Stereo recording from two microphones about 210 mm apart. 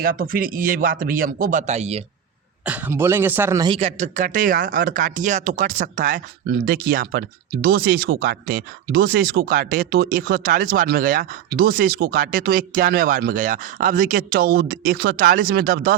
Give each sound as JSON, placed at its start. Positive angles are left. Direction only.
{"t": 0.0, "sound": "speech", "side_deg": -45}
{"t": 2.6, "sound": "speech", "side_deg": -10}
{"t": 3.8, "sound": "speech", "side_deg": -30}